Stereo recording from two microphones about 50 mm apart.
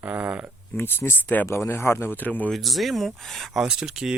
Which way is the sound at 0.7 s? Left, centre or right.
Left.